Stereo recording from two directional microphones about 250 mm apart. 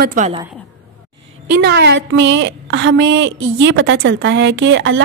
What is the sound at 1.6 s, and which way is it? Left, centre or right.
A woman's voice, right.